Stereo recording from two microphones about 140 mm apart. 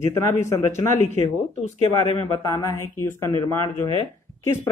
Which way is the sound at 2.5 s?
20° left (ahead or behind).